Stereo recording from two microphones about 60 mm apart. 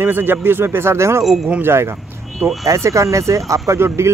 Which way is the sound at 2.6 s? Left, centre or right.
Right.